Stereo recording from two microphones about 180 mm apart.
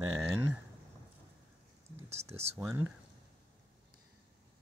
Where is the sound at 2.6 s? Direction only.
15° right (ahead or behind).